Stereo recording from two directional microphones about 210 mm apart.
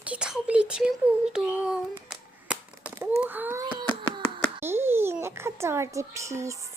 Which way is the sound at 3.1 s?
10° right (ahead or behind).